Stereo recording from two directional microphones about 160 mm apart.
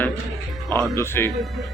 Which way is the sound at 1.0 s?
15° left (ahead or behind).